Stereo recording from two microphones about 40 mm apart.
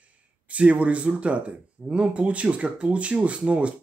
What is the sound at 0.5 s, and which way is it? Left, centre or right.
Speech, right.